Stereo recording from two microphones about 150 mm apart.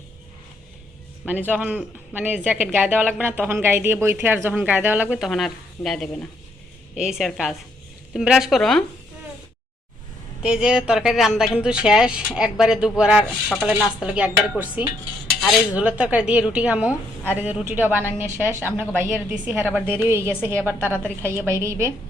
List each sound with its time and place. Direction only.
1.2 s speech: 10° right (ahead or behind)
10.4 s speech: 5° right (ahead or behind)
21.0 s a woman's voice: 10° left (ahead or behind)
21.6 s a woman's voice: 20° right (ahead or behind)